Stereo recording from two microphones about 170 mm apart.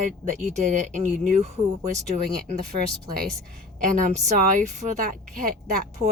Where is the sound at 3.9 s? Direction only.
45° right (ahead or behind).